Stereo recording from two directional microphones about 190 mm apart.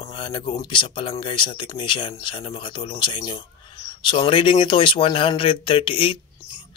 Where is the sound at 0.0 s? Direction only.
25° left (ahead or behind).